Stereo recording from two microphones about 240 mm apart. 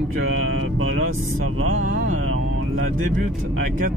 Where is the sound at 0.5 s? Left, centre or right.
Right.